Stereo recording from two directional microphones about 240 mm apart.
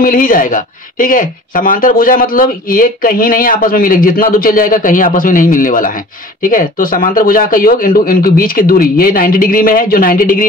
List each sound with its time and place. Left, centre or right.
0.0 s speech: left